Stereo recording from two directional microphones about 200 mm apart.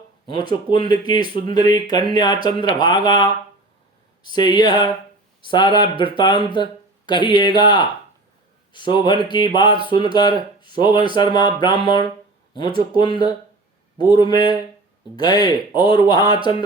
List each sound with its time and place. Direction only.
0.3 s speech: 25° left (ahead or behind)